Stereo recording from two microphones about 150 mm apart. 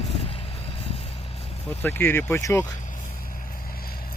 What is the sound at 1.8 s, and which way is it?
Speech, 15° left (ahead or behind).